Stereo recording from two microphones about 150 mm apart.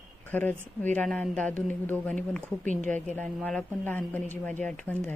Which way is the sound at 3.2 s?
5° left (ahead or behind).